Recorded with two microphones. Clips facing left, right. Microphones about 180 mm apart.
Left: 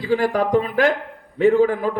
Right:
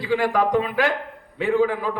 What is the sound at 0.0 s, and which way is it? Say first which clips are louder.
A man's voice: left 1 dB; 40° left (ahead or behind).